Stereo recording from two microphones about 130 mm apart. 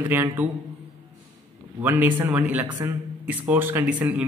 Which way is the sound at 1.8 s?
15° right (ahead or behind).